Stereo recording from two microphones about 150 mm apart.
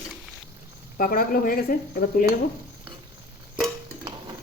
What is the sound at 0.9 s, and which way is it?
Speech, 70° left (ahead or behind).